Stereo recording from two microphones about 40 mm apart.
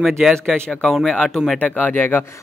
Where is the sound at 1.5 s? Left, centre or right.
Left.